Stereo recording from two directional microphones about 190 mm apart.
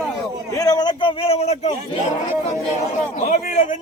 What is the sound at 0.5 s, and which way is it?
A man's voice, 20° left (ahead or behind).